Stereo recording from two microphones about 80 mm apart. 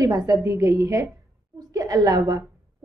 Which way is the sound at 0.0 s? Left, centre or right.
Right.